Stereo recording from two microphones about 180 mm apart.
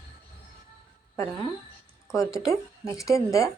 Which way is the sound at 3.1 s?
15° left (ahead or behind).